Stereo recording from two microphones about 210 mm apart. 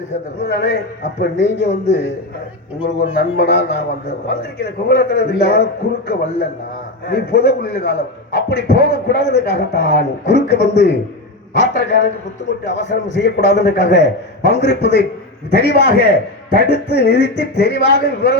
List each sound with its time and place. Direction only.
0.3 s a man's voice: 55° left (ahead or behind)
3.2 s a man's voice: 55° left (ahead or behind)